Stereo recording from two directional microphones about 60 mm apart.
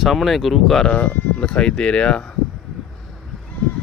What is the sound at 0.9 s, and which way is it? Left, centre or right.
Speech, left.